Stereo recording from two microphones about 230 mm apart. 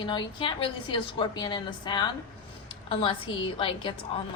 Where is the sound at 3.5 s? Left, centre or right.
Left.